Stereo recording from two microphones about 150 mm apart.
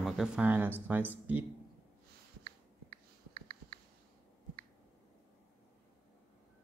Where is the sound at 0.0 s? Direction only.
Centre (ahead or behind).